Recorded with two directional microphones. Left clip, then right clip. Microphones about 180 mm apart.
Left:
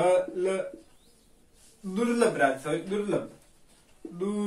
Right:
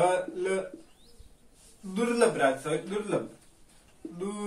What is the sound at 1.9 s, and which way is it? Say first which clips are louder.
Speech: even; 20° right (ahead or behind).